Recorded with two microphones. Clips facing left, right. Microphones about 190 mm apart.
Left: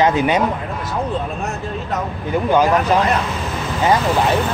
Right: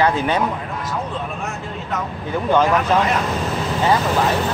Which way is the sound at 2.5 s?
10° left (ahead or behind).